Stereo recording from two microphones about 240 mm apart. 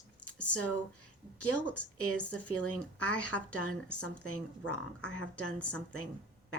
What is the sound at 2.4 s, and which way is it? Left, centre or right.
Speech, left.